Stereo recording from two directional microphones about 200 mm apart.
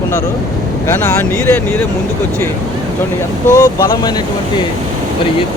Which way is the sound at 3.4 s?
15° left (ahead or behind).